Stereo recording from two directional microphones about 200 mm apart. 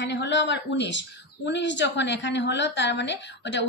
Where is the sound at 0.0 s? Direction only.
65° left (ahead or behind).